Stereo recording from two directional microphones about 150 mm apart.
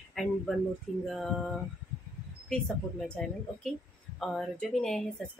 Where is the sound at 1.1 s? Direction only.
Centre (ahead or behind).